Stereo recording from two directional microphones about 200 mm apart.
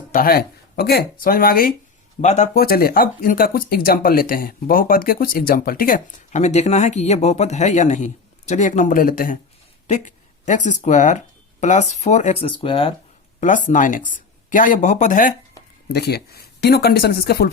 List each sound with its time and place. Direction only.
0.1 s speech: 45° left (ahead or behind)
2.2 s speech: 35° left (ahead or behind)
13.4 s speech: 40° left (ahead or behind)
15.9 s speech: 55° left (ahead or behind)